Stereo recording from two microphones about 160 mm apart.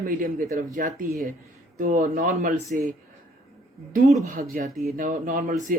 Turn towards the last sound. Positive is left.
turn(degrees=-55)  # may be behind; listen again after turning